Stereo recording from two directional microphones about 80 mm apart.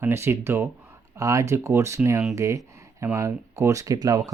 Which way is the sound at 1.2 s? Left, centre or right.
Right.